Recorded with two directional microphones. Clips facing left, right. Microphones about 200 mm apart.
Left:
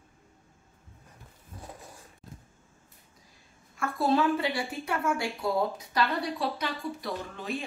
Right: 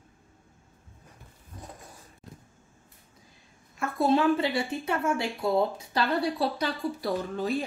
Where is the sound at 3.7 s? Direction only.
20° right (ahead or behind); by 7.6 s 40° right (ahead or behind).